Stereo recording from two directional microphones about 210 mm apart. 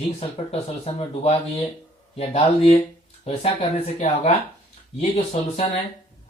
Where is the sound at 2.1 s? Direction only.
30° left (ahead or behind).